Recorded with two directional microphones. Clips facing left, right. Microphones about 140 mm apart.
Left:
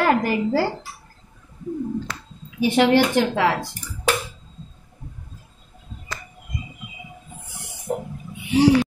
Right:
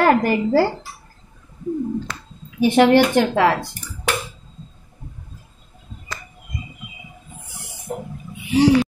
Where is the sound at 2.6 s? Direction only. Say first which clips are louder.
Right 3 dB; 50° right (ahead or behind).